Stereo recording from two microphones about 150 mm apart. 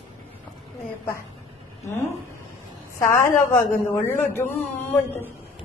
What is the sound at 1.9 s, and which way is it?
A woman's voice, 20° left (ahead or behind).